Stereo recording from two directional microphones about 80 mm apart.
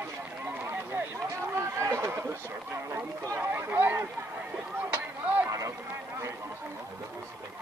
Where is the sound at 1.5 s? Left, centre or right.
Right.